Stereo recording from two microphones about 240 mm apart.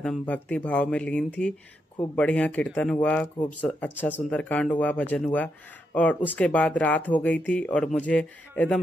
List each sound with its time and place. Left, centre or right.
0.0 s speech: centre